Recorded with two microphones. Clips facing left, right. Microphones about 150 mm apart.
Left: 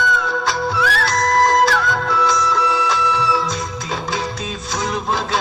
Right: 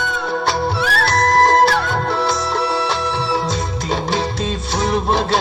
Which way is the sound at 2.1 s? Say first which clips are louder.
Left 3 dB; 60° right (ahead or behind).